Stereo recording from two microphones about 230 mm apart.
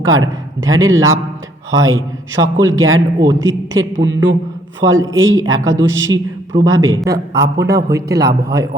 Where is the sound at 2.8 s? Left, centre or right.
Right.